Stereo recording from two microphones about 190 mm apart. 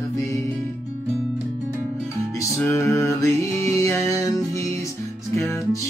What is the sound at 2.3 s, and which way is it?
Music, 15° left (ahead or behind).